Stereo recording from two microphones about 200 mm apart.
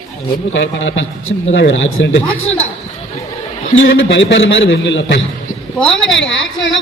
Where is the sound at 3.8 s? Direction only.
65° left (ahead or behind).